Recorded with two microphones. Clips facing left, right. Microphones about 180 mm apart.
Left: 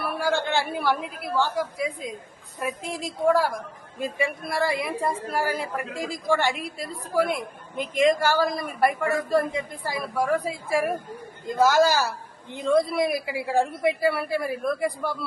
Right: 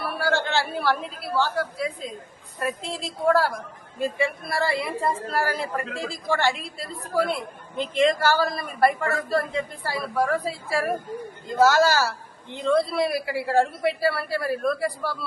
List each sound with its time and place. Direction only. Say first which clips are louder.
0.0 s a woman's voice: even; 15° left (ahead or behind)